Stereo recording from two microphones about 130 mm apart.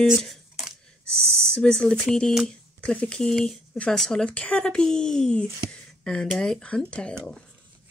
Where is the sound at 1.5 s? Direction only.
5° left (ahead or behind).